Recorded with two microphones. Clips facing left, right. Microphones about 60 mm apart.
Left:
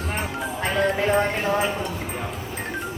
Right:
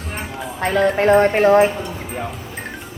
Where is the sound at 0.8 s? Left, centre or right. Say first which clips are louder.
Right 7 dB; right.